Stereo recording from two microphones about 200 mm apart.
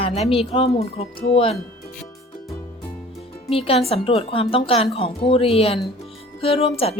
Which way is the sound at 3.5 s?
30° left (ahead or behind).